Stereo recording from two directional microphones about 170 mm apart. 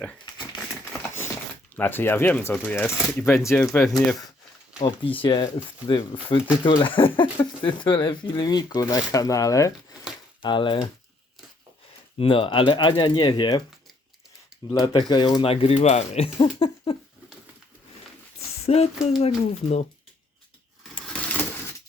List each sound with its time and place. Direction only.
1.7 s speech: 10° left (ahead or behind)
3.8 s speech: centre (ahead or behind)
4.8 s speech: 30° left (ahead or behind)
12.1 s speech: 30° left (ahead or behind)
14.7 s speech: 25° left (ahead or behind)
18.6 s speech: 35° left (ahead or behind)
21.1 s a sound: 10° left (ahead or behind)